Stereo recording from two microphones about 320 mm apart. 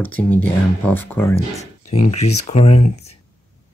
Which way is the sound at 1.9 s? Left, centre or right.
Centre.